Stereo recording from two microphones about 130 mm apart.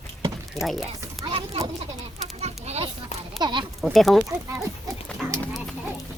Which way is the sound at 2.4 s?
55° right (ahead or behind).